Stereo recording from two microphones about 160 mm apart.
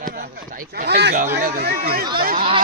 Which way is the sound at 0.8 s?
90° right.